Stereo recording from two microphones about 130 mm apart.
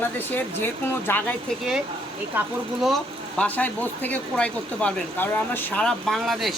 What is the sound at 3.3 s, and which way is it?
Speech, 10° left (ahead or behind).